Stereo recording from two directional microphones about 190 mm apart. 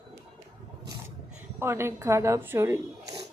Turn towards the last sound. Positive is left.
turn(degrees=-15)  # may be behind; listen again after turning